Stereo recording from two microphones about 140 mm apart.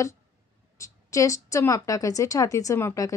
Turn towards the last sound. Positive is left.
turn(degrees=20)  # may be behind; listen again after turning